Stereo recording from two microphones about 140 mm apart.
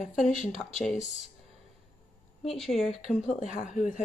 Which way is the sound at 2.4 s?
Centre (ahead or behind).